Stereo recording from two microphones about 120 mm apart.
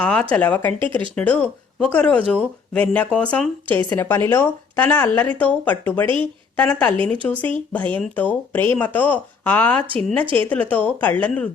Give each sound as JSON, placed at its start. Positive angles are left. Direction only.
{"t": 0.0, "sound": "speech", "side_deg": 10}
{"t": 0.8, "sound": "speech", "side_deg": -45}
{"t": 1.1, "sound": "speech", "side_deg": 10}